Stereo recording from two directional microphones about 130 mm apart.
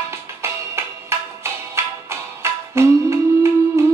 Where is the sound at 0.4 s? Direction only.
20° right (ahead or behind).